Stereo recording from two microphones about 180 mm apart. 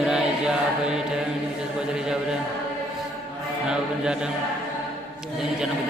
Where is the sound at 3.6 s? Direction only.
5° right (ahead or behind).